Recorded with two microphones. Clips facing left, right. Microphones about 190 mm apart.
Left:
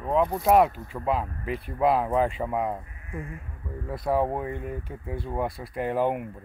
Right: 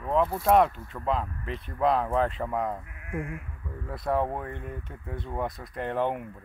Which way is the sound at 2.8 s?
75° right (ahead or behind).